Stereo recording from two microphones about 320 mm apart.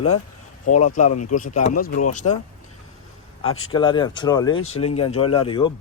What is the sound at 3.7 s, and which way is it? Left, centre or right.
Speech, centre.